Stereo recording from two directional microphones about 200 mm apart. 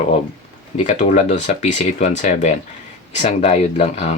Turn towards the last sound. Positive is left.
turn(degrees=35)  # may be behind; listen again after turning